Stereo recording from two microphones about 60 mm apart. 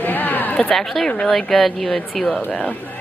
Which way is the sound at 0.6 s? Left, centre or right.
Centre.